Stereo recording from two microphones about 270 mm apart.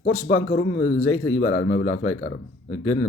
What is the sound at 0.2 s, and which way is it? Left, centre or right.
Speech, left.